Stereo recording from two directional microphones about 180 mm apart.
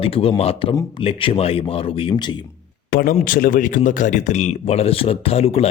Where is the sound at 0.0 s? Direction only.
30° left (ahead or behind).